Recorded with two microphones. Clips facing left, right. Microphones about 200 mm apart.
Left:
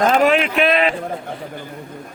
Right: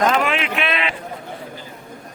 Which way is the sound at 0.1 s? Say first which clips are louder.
Left 5 dB; 40° left (ahead or behind).